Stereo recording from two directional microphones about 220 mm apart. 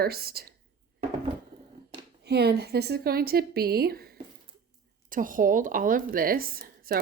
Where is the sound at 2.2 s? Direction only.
45° right (ahead or behind).